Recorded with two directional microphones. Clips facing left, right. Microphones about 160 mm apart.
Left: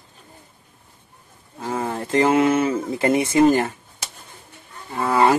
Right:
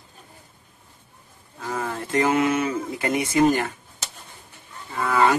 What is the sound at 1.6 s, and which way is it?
Speech, 30° left (ahead or behind).